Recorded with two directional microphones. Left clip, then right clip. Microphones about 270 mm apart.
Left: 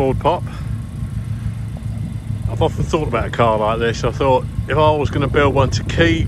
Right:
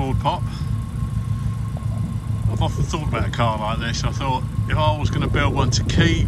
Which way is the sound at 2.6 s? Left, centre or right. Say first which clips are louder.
Left 9 dB; centre.